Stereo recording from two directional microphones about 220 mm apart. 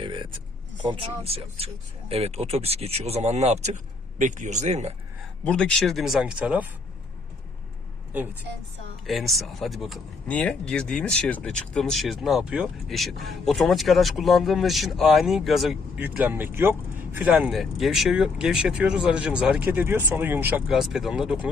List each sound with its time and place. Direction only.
0.0 s a sound: 20° right (ahead or behind)
0.8 s speech: 25° right (ahead or behind)
5.5 s speech: 5° left (ahead or behind)
9.0 s speech: centre (ahead or behind)